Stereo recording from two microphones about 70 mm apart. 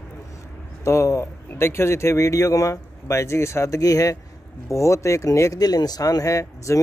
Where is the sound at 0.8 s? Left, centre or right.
Left.